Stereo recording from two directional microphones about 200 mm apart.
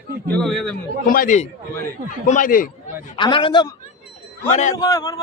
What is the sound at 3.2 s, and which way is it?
Speech, 25° left (ahead or behind).